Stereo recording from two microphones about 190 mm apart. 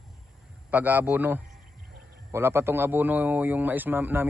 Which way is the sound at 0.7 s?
10° right (ahead or behind).